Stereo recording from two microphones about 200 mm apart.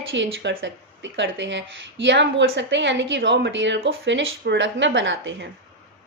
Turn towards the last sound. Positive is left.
turn(degrees=-70)  # may be behind; listen again after turning